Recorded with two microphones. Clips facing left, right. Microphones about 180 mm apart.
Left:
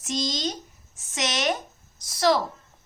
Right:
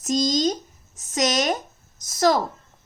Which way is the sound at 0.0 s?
40° right (ahead or behind).